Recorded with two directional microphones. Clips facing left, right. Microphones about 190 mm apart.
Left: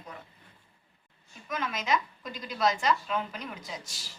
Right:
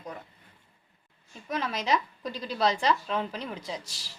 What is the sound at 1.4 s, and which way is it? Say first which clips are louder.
A woman's voice: right 2 dB; 35° right (ahead or behind).